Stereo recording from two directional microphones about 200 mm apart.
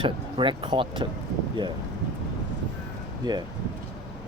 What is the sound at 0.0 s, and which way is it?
Speech, 25° right (ahead or behind).